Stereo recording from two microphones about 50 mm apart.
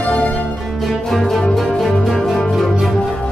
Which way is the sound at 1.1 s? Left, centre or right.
Centre.